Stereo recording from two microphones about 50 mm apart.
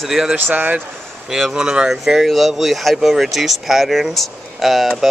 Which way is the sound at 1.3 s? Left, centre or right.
Centre.